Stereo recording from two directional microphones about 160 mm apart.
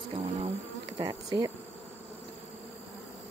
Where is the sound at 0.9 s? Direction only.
30° right (ahead or behind).